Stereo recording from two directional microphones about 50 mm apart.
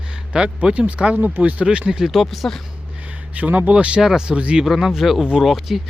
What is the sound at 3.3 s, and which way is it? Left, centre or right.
Speech, right.